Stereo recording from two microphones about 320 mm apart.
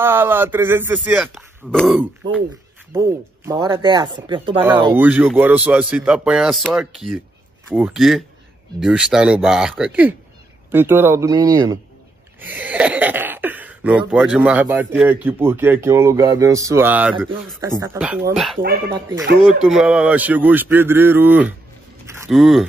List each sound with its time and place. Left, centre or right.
0.0 s speech: centre
18.6 s speech: right
19.6 s speech: centre
22.0 s a sound: centre